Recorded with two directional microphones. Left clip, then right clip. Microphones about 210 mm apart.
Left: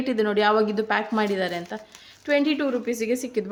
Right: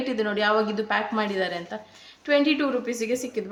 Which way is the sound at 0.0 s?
30° left (ahead or behind).